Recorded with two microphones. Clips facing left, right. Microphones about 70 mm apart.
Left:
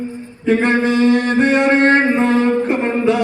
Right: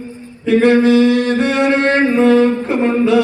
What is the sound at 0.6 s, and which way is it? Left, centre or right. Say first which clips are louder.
Music: right 6 dB; left.